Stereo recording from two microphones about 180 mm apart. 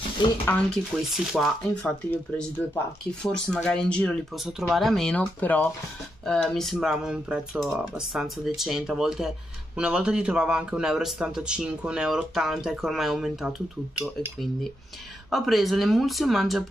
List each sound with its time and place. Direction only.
0.2 s speech: 25° left (ahead or behind)
1.1 s a man's voice: centre (ahead or behind)
15.2 s a man's voice: centre (ahead or behind)